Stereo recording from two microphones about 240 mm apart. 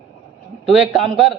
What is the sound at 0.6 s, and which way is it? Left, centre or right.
Speech, centre.